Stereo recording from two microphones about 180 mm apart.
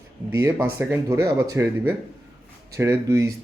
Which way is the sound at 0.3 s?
15° right (ahead or behind).